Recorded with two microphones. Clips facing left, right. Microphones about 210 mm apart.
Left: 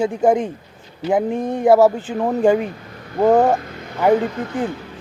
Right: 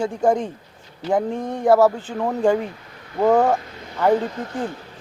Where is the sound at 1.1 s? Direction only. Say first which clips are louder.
Left 3 dB; 15° left (ahead or behind).